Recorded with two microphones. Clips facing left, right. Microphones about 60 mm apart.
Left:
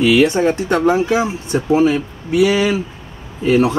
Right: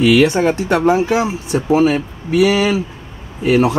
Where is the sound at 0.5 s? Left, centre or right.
Centre.